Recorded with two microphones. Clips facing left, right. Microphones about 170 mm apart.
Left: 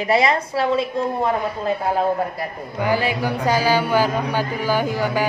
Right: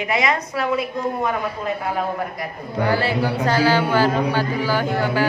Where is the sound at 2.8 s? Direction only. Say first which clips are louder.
Even; 15° left (ahead or behind).